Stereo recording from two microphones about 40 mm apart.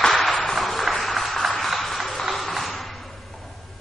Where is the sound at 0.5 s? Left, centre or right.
Centre.